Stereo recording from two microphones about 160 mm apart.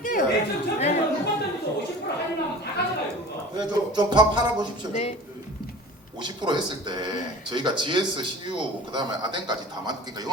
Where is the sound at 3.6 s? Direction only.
25° right (ahead or behind).